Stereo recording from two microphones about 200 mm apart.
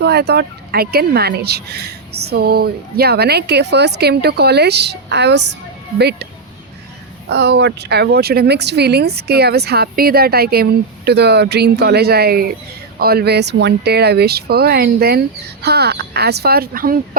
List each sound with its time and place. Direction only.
0.0 s speech: 55° right (ahead or behind)
7.3 s speech: 55° right (ahead or behind)